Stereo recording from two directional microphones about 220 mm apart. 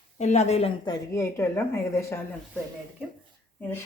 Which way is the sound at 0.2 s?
30° left (ahead or behind).